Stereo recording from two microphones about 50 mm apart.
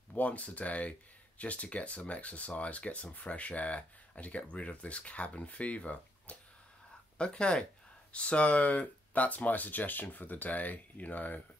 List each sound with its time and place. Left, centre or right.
0.1 s speech: left